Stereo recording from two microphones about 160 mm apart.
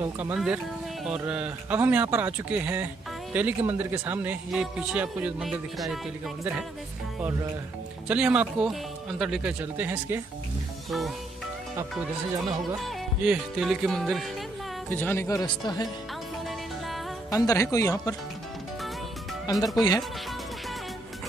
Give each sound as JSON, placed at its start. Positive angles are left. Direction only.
{"t": 0.0, "sound": "speech", "side_deg": -10}
{"t": 8.1, "sound": "speech", "side_deg": -10}
{"t": 10.9, "sound": "speech", "side_deg": 0}
{"t": 12.4, "sound": "speech", "side_deg": 0}
{"t": 14.9, "sound": "speech", "side_deg": 10}
{"t": 17.3, "sound": "speech", "side_deg": 20}
{"t": 19.4, "sound": "speech", "side_deg": 25}